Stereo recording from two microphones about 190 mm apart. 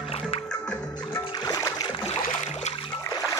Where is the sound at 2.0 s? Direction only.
35° left (ahead or behind).